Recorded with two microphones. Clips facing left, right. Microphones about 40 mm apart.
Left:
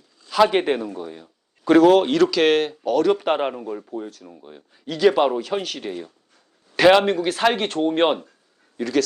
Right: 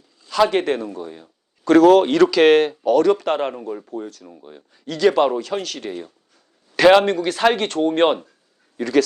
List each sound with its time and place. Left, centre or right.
0.3 s a man's voice: centre
3.2 s speech: centre
3.5 s speech: centre